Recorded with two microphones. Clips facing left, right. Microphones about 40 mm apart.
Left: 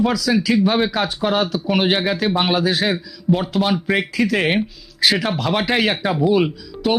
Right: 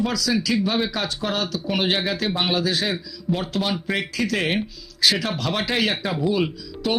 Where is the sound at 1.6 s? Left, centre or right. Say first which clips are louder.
Left 5 dB; centre.